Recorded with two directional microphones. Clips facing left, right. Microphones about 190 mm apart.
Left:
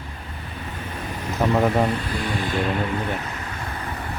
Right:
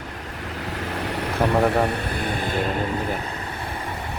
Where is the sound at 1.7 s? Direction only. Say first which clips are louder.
Even; 65° right (ahead or behind).